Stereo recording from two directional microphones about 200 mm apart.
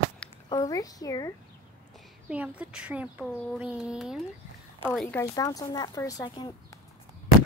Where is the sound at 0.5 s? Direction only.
15° left (ahead or behind).